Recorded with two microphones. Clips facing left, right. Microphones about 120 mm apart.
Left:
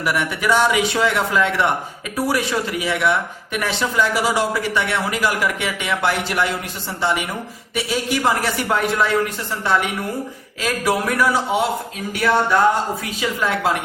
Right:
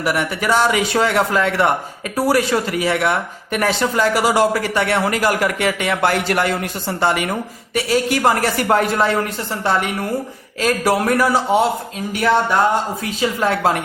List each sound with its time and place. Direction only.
0.0 s speech: 40° right (ahead or behind); by 7.3 s 55° right (ahead or behind)
7.9 s speech: 45° right (ahead or behind)
10.6 s a man's voice: 45° right (ahead or behind)
13.1 s a man's voice: 40° right (ahead or behind)